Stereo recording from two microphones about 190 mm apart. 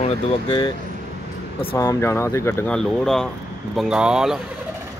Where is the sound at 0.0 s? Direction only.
25° left (ahead or behind).